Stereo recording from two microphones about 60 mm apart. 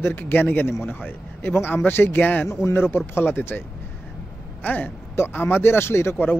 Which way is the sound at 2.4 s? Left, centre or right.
Left.